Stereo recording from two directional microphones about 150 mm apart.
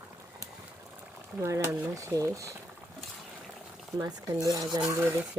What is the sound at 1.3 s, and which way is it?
Speech, 20° right (ahead or behind).